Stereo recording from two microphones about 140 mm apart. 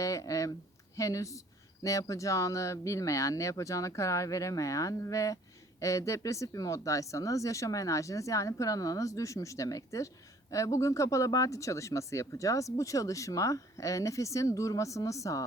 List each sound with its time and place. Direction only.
0.0 s speech: 25° left (ahead or behind)